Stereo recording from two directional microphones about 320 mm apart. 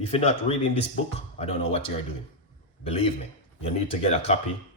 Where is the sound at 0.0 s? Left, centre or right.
Centre.